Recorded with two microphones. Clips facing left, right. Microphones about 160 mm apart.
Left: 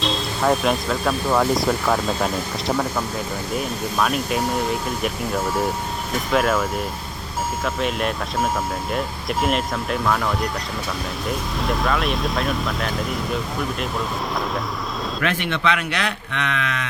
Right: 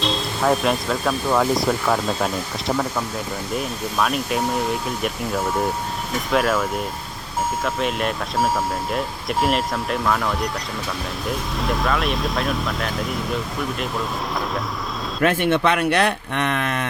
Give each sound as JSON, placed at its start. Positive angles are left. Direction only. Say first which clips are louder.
{"t": 0.0, "sound": "speech", "louder": "even", "side_deg": 0}
{"t": 15.2, "sound": "speech", "louder": "right 6 dB", "side_deg": -50}